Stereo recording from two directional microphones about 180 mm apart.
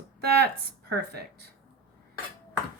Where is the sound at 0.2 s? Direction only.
60° right (ahead or behind).